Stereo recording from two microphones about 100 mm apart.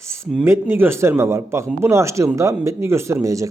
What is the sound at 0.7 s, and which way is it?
Speech, 25° right (ahead or behind).